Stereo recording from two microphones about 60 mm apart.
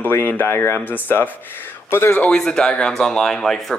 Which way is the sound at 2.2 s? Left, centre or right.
Centre.